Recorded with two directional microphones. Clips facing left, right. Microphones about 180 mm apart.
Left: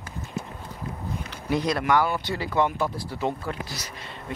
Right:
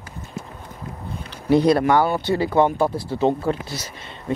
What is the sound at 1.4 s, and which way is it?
Speech, 30° right (ahead or behind).